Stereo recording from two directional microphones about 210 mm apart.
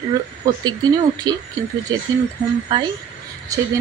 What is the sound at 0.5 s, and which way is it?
Speech, 15° right (ahead or behind).